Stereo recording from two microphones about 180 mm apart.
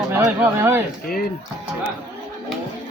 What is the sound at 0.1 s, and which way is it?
Speech, 15° right (ahead or behind).